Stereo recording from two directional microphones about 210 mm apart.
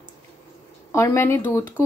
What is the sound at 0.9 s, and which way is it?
Speech, 15° left (ahead or behind).